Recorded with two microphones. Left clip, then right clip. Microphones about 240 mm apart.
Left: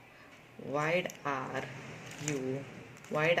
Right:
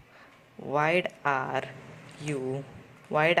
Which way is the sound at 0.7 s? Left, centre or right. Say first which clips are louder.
Right 6 dB; right.